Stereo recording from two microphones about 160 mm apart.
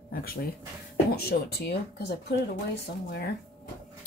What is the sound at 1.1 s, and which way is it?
Speech, 80° left.